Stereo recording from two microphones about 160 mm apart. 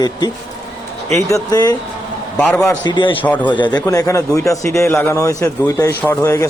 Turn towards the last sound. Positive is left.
turn(degrees=20)  # may be behind; listen again after turning